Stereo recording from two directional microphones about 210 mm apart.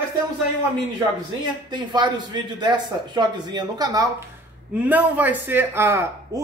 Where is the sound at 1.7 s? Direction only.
20° right (ahead or behind).